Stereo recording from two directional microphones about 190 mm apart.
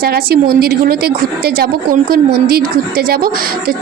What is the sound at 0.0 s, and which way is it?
A woman's voice, 55° right (ahead or behind).